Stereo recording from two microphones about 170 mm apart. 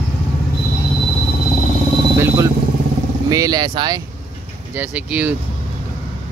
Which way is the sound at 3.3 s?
20° right (ahead or behind).